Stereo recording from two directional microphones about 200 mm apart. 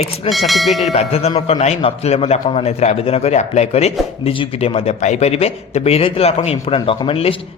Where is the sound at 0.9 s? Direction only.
30° left (ahead or behind).